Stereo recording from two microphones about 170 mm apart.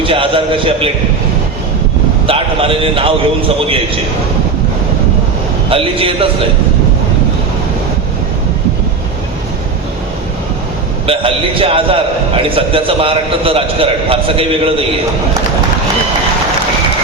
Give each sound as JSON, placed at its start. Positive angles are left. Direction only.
{"t": 0.0, "sound": "a man's voice", "side_deg": -30}
{"t": 2.2, "sound": "a man's voice", "side_deg": -35}
{"t": 5.6, "sound": "a man's voice", "side_deg": -30}
{"t": 11.0, "sound": "a man's voice", "side_deg": -30}